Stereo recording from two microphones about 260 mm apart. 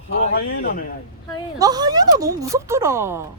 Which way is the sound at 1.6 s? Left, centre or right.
Centre.